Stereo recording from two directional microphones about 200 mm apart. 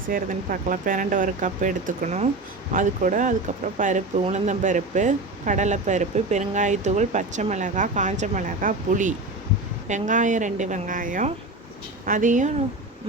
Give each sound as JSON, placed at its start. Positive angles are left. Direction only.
{"t": 0.1, "sound": "speech", "side_deg": -45}